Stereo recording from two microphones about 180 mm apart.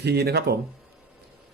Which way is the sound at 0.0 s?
65° right (ahead or behind).